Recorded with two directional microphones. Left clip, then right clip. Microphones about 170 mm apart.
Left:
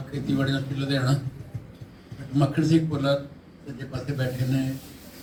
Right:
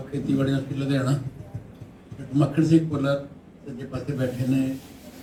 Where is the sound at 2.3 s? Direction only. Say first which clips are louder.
Right 2 dB; 55° right (ahead or behind).